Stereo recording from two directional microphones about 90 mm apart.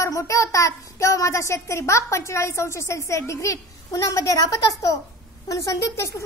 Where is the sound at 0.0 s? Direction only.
35° left (ahead or behind).